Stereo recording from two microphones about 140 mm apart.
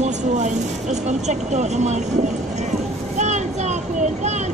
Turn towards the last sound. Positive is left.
turn(degrees=-55)  # may be behind; listen again after turning